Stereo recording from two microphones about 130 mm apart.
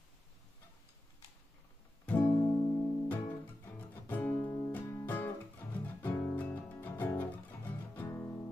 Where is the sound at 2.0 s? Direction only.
15° left (ahead or behind).